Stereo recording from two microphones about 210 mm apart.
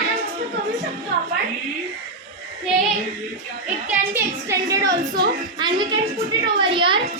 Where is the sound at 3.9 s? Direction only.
10° right (ahead or behind).